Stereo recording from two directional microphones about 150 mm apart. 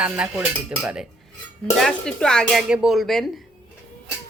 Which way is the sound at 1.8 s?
5° left (ahead or behind).